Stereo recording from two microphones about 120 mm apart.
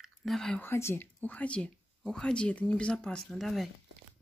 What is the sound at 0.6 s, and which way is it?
Speech, 20° left (ahead or behind).